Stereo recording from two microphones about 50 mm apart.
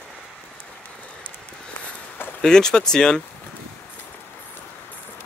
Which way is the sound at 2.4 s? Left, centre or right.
Centre.